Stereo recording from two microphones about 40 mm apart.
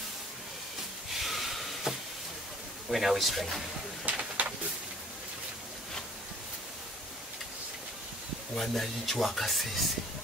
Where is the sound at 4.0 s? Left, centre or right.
Right.